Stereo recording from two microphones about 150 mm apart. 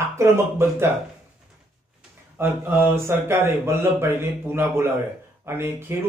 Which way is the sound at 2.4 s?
15° right (ahead or behind).